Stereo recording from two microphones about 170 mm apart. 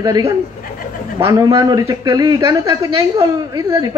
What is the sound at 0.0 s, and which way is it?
A man's voice, 20° right (ahead or behind).